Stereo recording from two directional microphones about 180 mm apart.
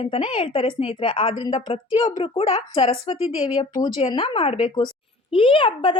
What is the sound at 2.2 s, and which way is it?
A woman's voice, 35° left (ahead or behind).